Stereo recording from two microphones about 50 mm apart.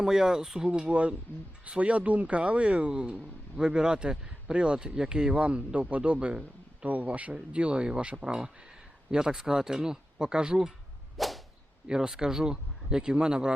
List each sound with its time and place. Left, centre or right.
0.0 s speech: centre
6.8 s speech: right; by 10.7 s centre
11.2 s whip: centre
11.9 s speech: centre